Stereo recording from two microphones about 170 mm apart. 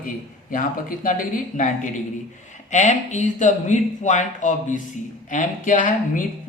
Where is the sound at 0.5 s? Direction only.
50° left (ahead or behind).